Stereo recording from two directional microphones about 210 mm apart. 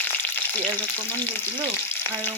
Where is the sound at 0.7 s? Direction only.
10° left (ahead or behind).